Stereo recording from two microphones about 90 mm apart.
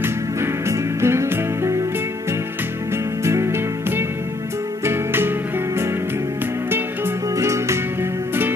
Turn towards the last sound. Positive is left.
turn(degrees=-30)  # may be behind; listen again after turning